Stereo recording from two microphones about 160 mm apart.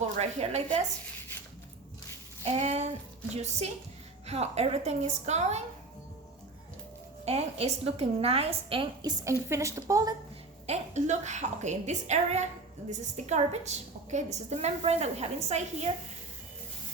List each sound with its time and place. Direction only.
0.2 s a woman's voice: 40° right (ahead or behind)
2.4 s a woman's voice: 40° right (ahead or behind)
4.3 s a woman's voice: 40° right (ahead or behind)
7.3 s a woman's voice: 40° right (ahead or behind); by 10.2 s 20° right (ahead or behind)
10.7 s a woman's voice: 45° right (ahead or behind)